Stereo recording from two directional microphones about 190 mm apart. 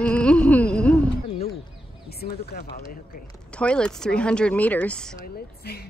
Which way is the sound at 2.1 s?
55° left (ahead or behind).